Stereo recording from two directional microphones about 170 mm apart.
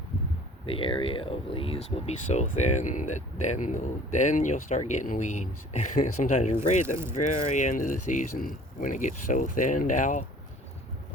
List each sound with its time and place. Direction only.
0.6 s speech: 30° left (ahead or behind)
6.8 s speech: 15° right (ahead or behind)
7.1 s speech: 45° left (ahead or behind)